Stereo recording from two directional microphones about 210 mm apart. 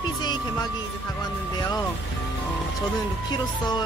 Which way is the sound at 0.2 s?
20° left (ahead or behind).